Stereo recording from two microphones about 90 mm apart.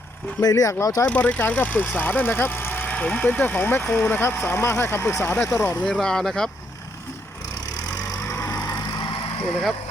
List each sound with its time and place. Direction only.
0.4 s speech: 40° left (ahead or behind)
1.0 s speech: 15° left (ahead or behind)
5.8 s speech: 5° left (ahead or behind)
8.0 s vehicle: 35° left (ahead or behind)